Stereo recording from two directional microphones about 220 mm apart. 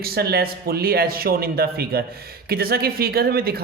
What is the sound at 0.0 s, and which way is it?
A man's voice, 45° right (ahead or behind).